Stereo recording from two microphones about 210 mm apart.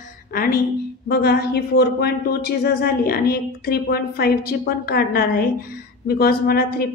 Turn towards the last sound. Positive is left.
turn(degrees=45)  # may be behind; listen again after turning